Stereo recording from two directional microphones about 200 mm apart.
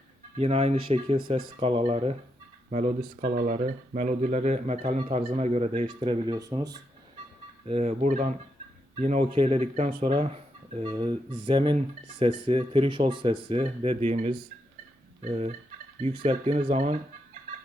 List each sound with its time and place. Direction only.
0.3 s speech: 30° right (ahead or behind)
7.7 s speech: 35° right (ahead or behind)